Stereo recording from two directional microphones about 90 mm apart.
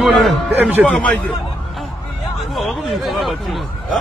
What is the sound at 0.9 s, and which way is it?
Speech, 15° left (ahead or behind).